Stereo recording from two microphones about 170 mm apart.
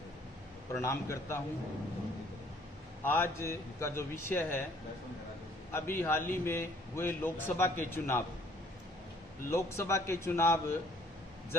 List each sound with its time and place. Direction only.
0.8 s a man's voice: 15° left (ahead or behind)
3.0 s a man's voice: 15° left (ahead or behind)
5.7 s a man's voice: 15° left (ahead or behind)
9.5 s a man's voice: 15° left (ahead or behind)